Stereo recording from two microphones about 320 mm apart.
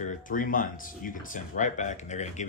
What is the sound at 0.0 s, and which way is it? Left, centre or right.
Speech, left.